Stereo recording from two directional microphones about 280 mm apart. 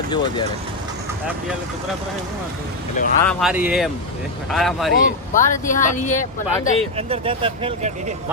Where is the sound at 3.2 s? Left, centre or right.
Centre.